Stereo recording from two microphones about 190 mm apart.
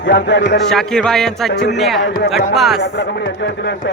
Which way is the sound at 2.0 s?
60° left (ahead or behind).